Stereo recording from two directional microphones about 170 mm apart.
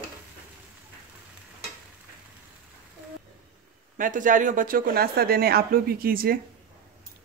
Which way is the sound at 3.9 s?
50° right (ahead or behind).